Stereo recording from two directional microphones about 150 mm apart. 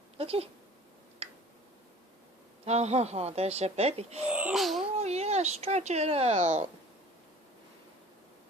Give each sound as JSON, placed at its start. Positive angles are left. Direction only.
{"t": 0.2, "sound": "speech", "side_deg": -40}
{"t": 1.2, "sound": "tick", "side_deg": -40}
{"t": 2.6, "sound": "speech", "side_deg": -45}
{"t": 4.3, "sound": "speech", "side_deg": -10}
{"t": 4.9, "sound": "speech", "side_deg": -45}